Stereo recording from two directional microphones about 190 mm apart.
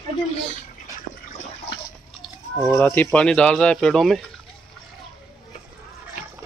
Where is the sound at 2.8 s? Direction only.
10° left (ahead or behind).